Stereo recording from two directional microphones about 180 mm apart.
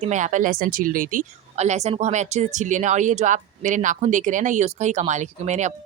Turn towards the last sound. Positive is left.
turn(degrees=-40)  # may be behind; listen again after turning